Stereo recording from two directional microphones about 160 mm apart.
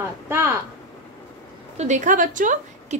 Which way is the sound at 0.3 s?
15° right (ahead or behind).